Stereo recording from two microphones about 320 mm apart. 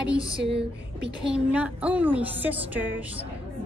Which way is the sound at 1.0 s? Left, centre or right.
Centre.